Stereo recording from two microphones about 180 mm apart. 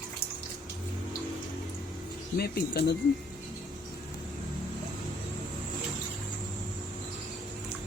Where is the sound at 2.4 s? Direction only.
65° left (ahead or behind).